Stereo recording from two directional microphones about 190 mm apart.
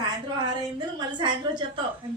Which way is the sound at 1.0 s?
25° right (ahead or behind).